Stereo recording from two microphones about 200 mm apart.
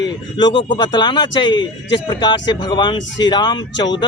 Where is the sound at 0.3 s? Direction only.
20° left (ahead or behind).